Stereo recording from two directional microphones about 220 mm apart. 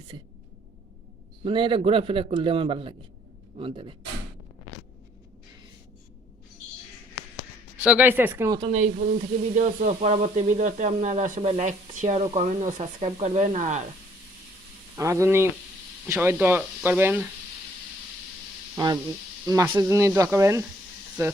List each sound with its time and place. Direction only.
1.5 s a man's voice: 20° right (ahead or behind)
7.9 s speech: 10° right (ahead or behind); by 13.8 s 35° right (ahead or behind)
14.9 s speech: 15° right (ahead or behind)
18.8 s a man's voice: 20° right (ahead or behind)